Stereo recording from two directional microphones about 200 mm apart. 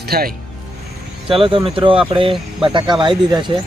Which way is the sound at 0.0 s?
50° right (ahead or behind).